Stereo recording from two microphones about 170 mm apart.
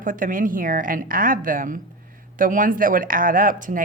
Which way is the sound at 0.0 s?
50° right (ahead or behind).